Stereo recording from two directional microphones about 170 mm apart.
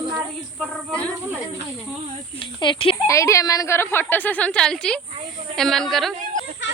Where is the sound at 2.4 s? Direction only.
30° left (ahead or behind).